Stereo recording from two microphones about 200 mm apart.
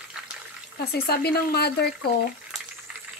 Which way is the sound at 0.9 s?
50° left (ahead or behind).